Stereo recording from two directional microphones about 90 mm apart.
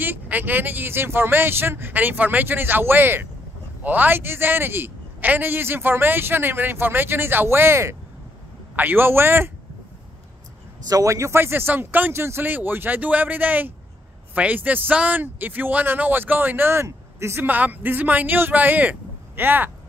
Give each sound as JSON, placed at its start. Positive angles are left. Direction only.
{"t": 0.0, "sound": "speech", "side_deg": -20}
{"t": 10.9, "sound": "speech", "side_deg": -40}